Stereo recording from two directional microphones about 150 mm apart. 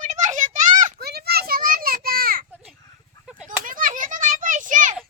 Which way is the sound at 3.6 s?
65° right (ahead or behind).